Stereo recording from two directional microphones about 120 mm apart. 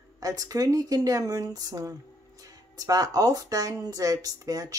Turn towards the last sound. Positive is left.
turn(degrees=-30)  # may be behind; listen again after turning